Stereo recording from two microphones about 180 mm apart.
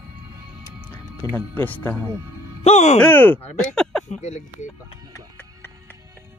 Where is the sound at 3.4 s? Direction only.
40° left (ahead or behind).